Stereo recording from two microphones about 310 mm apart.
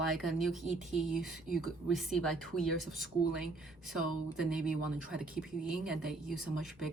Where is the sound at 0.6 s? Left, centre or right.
Right.